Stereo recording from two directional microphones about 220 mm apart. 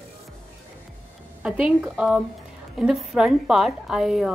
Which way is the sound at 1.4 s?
5° right (ahead or behind).